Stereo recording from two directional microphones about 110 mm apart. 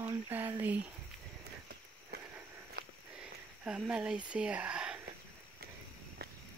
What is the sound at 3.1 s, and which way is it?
Speech, 10° right (ahead or behind).